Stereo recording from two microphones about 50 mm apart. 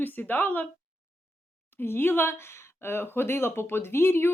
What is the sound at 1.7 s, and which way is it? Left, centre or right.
Speech, left.